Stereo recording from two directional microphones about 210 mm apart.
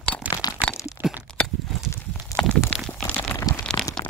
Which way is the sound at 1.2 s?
Centre (ahead or behind).